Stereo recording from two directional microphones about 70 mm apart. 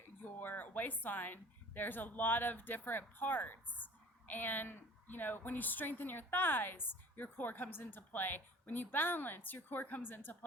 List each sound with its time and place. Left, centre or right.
0.3 s a woman's voice: left